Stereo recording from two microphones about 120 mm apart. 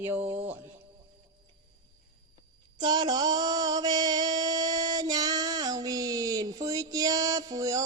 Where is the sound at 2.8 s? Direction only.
35° right (ahead or behind).